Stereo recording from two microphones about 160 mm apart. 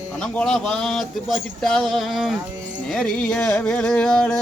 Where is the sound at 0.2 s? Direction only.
5° left (ahead or behind).